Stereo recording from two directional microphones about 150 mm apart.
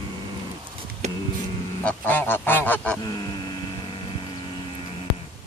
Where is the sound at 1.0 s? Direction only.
50° right (ahead or behind).